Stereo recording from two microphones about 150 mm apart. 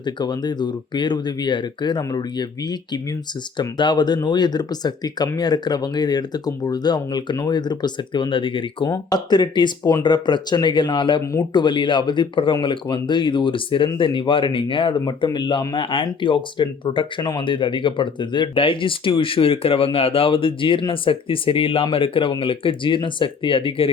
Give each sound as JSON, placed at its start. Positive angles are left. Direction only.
{"t": 0.0, "sound": "speech", "side_deg": 30}